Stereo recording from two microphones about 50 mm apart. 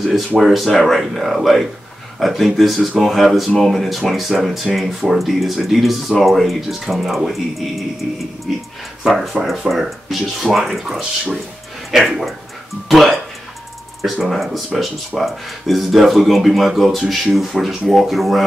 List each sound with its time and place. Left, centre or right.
0.4 s speech: centre